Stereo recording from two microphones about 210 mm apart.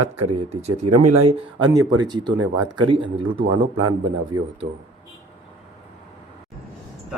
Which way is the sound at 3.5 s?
90° right.